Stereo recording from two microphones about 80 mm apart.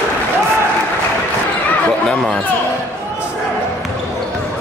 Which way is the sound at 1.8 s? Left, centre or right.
Centre.